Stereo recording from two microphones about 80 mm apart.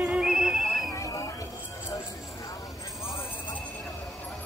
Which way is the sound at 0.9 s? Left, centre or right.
Left.